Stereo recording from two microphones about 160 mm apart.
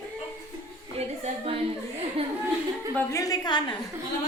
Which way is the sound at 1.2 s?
35° right (ahead or behind).